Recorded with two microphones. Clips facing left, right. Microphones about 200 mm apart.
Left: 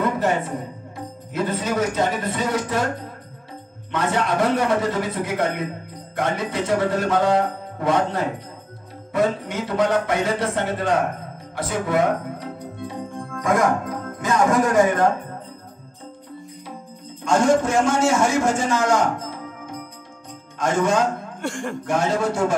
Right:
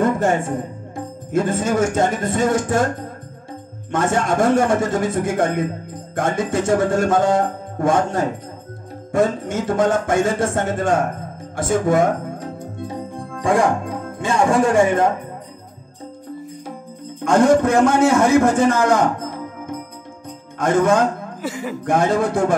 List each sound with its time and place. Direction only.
0.0 s speech: 45° right (ahead or behind)
3.9 s speech: 45° right (ahead or behind); by 15.0 s 25° right (ahead or behind)
17.2 s a man's voice: 55° right (ahead or behind)
21.4 s speech: 5° right (ahead or behind)
21.8 s speech: 55° right (ahead or behind)